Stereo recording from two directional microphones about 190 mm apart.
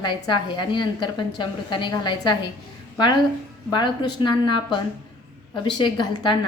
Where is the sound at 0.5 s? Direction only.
25° left (ahead or behind).